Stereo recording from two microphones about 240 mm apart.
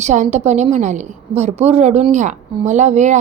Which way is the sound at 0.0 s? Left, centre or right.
Right.